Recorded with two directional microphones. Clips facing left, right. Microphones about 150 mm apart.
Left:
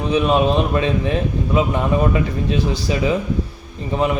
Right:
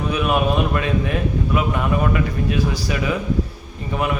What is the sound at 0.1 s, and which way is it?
A man's voice, 25° left (ahead or behind).